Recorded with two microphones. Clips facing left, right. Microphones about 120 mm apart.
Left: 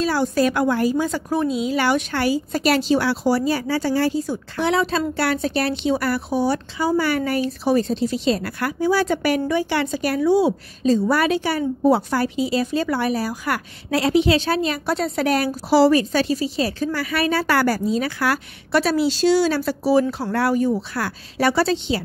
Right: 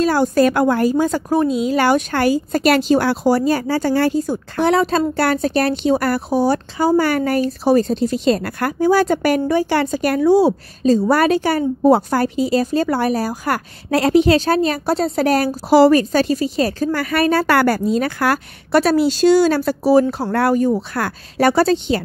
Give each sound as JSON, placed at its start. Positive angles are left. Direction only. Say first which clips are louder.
{"t": 0.0, "sound": "a woman's voice", "louder": "right 5 dB", "side_deg": -50}
{"t": 3.9, "sound": "a woman's voice", "louder": "right 4 dB", "side_deg": -55}